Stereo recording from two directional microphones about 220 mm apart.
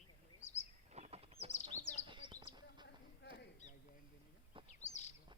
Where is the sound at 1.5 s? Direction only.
30° left (ahead or behind).